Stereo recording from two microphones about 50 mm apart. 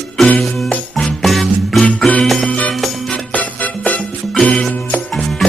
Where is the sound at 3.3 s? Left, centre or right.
Left.